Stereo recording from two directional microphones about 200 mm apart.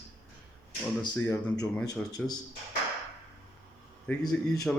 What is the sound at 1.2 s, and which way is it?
Speech, 10° left (ahead or behind).